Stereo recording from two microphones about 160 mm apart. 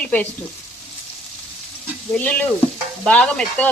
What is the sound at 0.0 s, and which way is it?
Frying, 10° left (ahead or behind).